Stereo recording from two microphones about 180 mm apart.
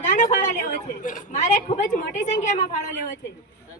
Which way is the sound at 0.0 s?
45° left (ahead or behind).